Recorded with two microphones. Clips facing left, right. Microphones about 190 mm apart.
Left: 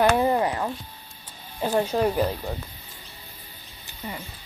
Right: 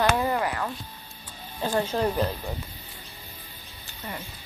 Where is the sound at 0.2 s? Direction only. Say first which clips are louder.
Left 4 dB; 25° left (ahead or behind).